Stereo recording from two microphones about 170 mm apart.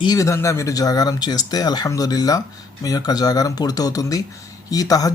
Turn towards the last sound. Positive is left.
turn(degrees=20)  # may be behind; listen again after turning